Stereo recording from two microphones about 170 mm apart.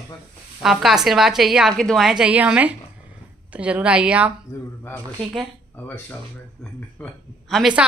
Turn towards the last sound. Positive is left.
turn(degrees=0)  # may be behind; listen again after turning